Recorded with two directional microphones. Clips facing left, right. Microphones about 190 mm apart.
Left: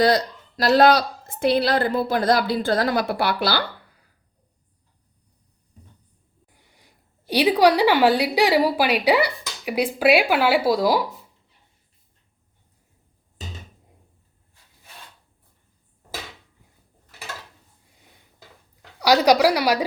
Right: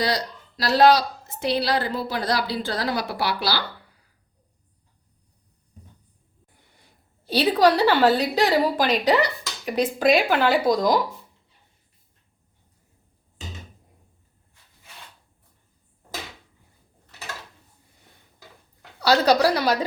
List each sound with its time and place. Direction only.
0.0 s a woman's voice: 50° left (ahead or behind)
7.3 s a woman's voice: 15° left (ahead or behind)
18.9 s a woman's voice: 15° left (ahead or behind)